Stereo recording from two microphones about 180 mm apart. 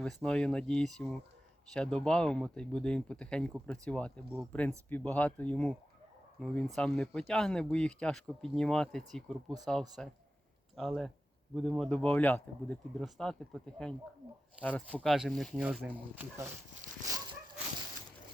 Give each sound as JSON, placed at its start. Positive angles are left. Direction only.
{"t": 0.0, "sound": "speech", "side_deg": 5}
{"t": 16.8, "sound": "dog", "side_deg": -40}